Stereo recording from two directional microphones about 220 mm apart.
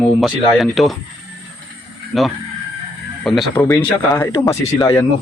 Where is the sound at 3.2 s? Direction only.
Centre (ahead or behind).